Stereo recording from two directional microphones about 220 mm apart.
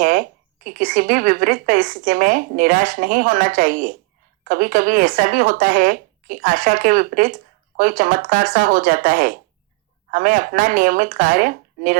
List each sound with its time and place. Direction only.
0.0 s speech: 40° right (ahead or behind)